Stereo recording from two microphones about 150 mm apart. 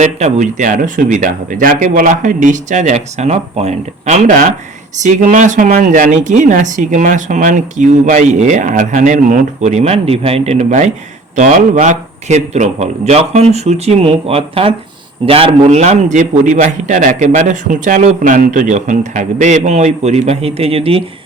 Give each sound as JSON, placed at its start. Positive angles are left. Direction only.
{"t": 0.0, "sound": "a man's voice", "side_deg": -50}